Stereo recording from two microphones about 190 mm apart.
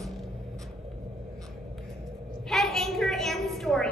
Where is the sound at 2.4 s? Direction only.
Centre (ahead or behind).